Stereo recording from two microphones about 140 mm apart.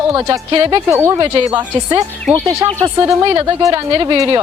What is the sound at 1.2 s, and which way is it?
A woman's voice, 35° right (ahead or behind).